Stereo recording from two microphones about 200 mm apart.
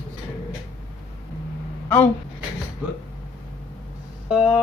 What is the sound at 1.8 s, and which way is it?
Speech, 10° left (ahead or behind).